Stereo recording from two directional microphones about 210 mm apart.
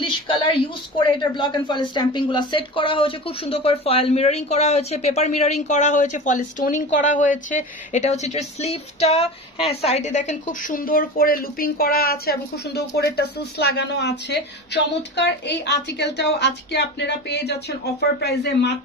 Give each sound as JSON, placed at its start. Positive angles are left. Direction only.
{"t": 0.0, "sound": "a woman's voice", "side_deg": 25}